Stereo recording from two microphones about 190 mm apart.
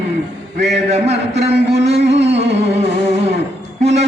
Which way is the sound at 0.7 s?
35° right (ahead or behind).